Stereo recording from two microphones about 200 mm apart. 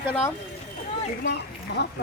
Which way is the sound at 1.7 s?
55° left (ahead or behind).